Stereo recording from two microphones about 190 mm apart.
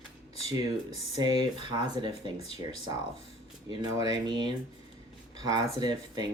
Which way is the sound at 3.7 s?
20° right (ahead or behind).